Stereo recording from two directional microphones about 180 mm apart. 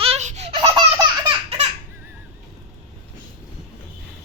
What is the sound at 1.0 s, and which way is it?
Laughter, 25° right (ahead or behind).